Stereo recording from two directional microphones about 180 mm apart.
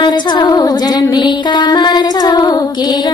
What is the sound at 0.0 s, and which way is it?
Music, 25° left (ahead or behind).